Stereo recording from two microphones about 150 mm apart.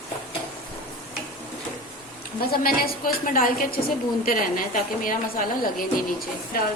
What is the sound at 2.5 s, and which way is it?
A woman's voice, 85° left.